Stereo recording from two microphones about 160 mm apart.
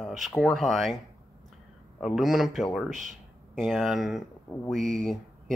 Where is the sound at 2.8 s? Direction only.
50° right (ahead or behind).